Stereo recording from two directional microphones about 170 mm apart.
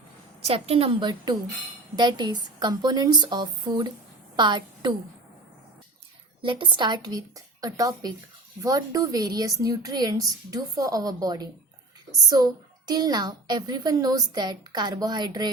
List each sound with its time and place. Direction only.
0.4 s a woman's voice: 35° right (ahead or behind)
6.4 s a woman's voice: 30° right (ahead or behind)